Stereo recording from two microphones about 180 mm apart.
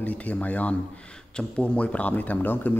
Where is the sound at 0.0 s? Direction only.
10° left (ahead or behind).